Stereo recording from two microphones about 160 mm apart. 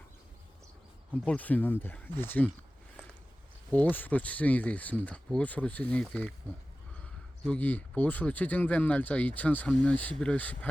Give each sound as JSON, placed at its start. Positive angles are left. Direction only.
{"t": 1.2, "sound": "speech", "side_deg": 10}
{"t": 3.7, "sound": "speech", "side_deg": 10}